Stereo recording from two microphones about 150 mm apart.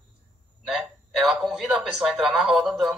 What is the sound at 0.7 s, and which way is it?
Speech, centre (ahead or behind).